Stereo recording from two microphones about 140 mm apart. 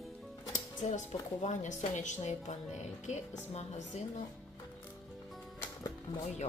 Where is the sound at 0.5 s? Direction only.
60° left (ahead or behind).